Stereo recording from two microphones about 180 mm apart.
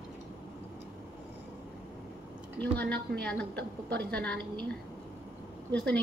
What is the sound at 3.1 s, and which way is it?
A woman's voice, 5° left (ahead or behind).